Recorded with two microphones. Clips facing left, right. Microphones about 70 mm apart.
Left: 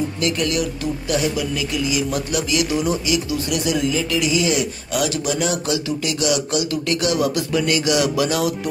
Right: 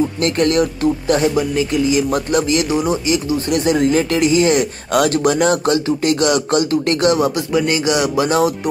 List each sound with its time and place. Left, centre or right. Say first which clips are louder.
0.2 s speech: right 6 dB; right
7.2 s speech: right 3 dB; right